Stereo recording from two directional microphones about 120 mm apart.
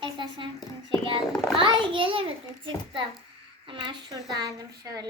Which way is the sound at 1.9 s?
45° right (ahead or behind).